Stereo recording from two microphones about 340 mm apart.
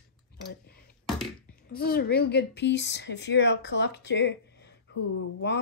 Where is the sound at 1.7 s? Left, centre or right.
Left.